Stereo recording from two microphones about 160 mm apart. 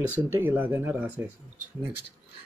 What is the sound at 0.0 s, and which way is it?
Speech, 10° right (ahead or behind).